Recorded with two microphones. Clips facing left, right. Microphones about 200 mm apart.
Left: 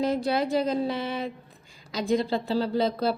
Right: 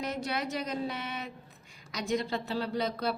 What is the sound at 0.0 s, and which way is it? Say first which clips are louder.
Speech: left 9 dB; 30° left (ahead or behind).